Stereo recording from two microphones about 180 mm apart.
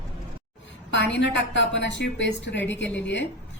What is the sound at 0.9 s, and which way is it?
A woman's voice, 85° left.